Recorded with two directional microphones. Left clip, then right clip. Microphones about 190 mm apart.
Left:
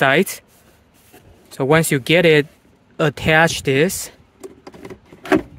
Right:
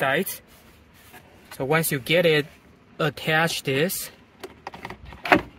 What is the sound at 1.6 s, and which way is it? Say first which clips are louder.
Speech: left 8 dB; 50° left (ahead or behind).